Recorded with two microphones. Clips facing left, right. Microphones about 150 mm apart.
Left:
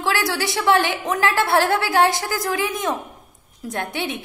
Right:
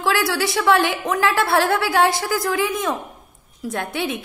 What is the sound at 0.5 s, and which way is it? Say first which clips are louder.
A woman's voice: even; 20° left (ahead or behind).